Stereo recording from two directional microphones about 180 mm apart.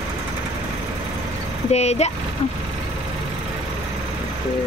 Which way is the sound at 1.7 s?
35° left (ahead or behind).